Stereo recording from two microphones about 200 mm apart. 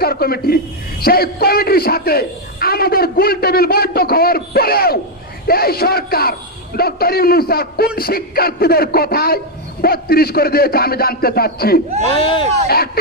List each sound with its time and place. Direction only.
0.0 s a man's voice: 50° left (ahead or behind)
12.1 s speech: 25° left (ahead or behind)
12.6 s a man's voice: 50° left (ahead or behind)